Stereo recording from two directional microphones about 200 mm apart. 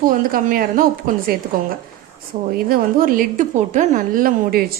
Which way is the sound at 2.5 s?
45° right (ahead or behind).